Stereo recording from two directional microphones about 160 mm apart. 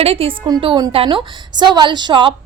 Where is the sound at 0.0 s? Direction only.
35° right (ahead or behind).